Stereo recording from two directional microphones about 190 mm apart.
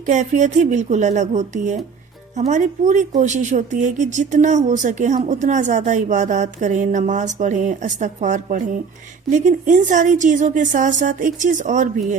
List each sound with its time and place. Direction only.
0.1 s speech: 40° right (ahead or behind)